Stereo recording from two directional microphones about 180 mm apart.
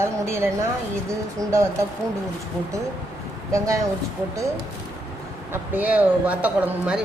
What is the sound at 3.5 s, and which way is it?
Speech, 15° right (ahead or behind).